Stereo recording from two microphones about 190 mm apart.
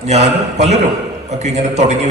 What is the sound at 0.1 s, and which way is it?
Mantra, 35° right (ahead or behind).